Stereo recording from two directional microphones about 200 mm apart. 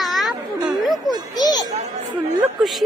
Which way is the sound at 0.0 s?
Centre (ahead or behind).